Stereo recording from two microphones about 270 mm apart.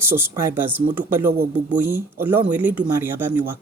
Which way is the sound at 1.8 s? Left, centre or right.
Centre.